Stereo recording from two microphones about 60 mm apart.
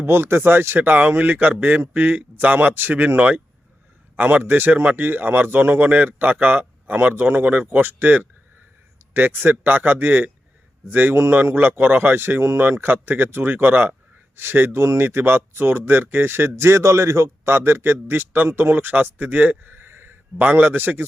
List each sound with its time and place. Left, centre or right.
0.0 s a man's voice: right
5.8 s a man's voice: right
14.7 s speech: right
15.0 s a man's voice: right
16.6 s a man's voice: right